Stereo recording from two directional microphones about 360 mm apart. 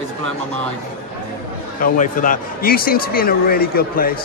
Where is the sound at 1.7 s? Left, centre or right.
Left.